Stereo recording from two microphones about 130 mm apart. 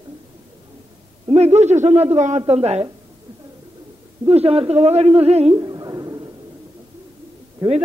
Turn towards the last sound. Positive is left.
turn(degrees=-40)  # may be behind; listen again after turning